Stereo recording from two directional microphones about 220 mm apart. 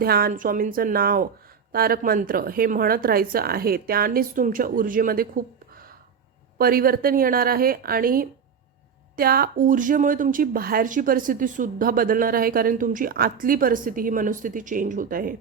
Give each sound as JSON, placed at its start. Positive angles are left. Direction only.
{"t": 0.0, "sound": "speech", "side_deg": -45}
{"t": 6.6, "sound": "speech", "side_deg": -40}